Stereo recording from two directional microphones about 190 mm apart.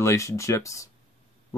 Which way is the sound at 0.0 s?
15° left (ahead or behind).